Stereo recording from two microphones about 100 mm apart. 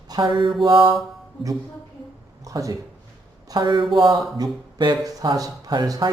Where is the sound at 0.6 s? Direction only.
45° right (ahead or behind).